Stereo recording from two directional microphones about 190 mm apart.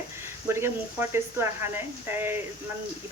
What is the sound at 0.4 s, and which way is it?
Speech, 15° right (ahead or behind).